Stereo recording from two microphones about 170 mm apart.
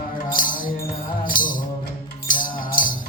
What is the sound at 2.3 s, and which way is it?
Music, 55° left (ahead or behind).